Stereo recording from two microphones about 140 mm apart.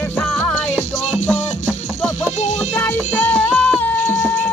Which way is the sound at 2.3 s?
55° left (ahead or behind).